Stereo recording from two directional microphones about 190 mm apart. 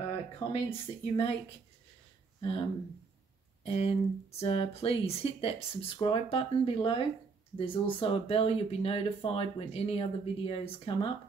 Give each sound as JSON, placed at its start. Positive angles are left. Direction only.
{"t": 0.5, "sound": "speech", "side_deg": 30}
{"t": 2.4, "sound": "speech", "side_deg": 30}